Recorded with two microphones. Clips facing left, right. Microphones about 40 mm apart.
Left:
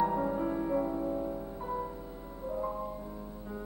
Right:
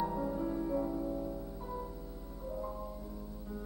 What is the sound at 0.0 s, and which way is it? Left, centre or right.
Music, left.